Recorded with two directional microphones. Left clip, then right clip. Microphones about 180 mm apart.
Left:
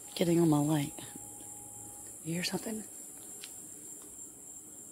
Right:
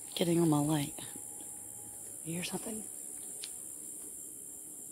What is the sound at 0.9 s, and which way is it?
Whispering, centre (ahead or behind).